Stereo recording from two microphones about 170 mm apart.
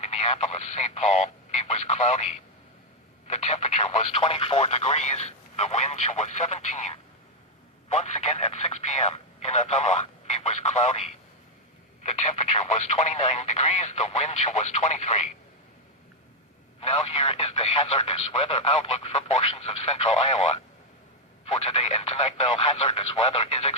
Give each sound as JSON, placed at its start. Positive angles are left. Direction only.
{"t": 0.0, "sound": "speech", "side_deg": 40}
{"t": 16.8, "sound": "speech", "side_deg": 35}